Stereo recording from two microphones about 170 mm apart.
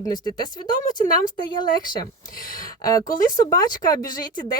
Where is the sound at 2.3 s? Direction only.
55° left (ahead or behind).